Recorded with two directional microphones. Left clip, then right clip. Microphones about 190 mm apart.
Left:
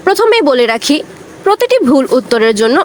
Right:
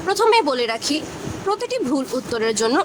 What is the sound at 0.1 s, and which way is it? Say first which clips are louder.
Speech: left 8 dB; 30° left (ahead or behind).